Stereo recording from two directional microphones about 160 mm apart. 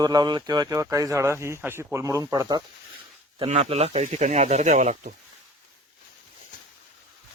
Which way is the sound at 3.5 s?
40° right (ahead or behind).